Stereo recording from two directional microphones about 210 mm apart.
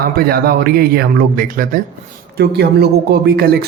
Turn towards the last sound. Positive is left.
turn(degrees=-50)  # may be behind; listen again after turning